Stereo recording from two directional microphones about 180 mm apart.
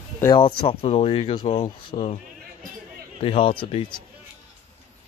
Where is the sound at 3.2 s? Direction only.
30° left (ahead or behind).